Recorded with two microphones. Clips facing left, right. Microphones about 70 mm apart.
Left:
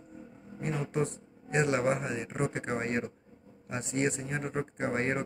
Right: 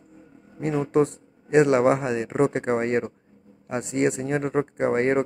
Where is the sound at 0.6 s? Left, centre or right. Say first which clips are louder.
Right 10 dB; right.